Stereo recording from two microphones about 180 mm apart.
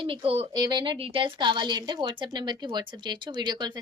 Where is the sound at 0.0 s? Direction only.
30° right (ahead or behind).